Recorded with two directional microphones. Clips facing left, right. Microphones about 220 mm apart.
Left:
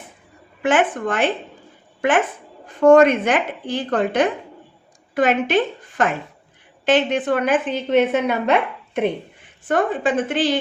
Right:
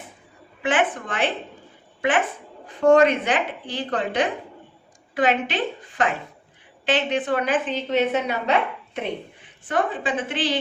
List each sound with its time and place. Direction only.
0.6 s a woman's voice: 45° left (ahead or behind)
6.8 s a woman's voice: 45° left (ahead or behind)
9.6 s a woman's voice: 45° left (ahead or behind)